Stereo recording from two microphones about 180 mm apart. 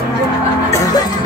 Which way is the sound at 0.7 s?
20° left (ahead or behind).